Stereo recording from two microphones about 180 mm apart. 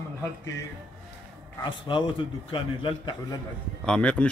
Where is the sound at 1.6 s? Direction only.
25° left (ahead or behind).